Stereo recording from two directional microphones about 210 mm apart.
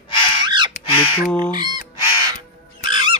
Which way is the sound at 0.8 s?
25° left (ahead or behind).